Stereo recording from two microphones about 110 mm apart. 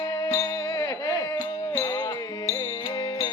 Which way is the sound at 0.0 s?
30° left (ahead or behind).